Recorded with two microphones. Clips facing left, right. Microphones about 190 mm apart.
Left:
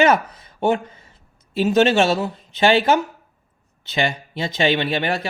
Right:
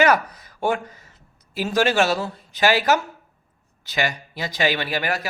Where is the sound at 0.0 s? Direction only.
25° left (ahead or behind).